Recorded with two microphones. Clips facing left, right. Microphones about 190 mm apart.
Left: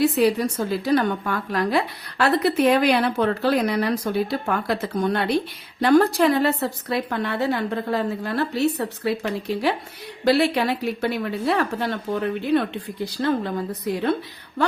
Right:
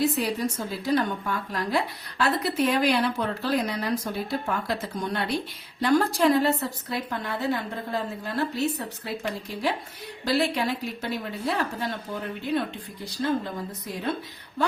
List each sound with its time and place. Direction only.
0.0 s a woman's voice: 65° left (ahead or behind)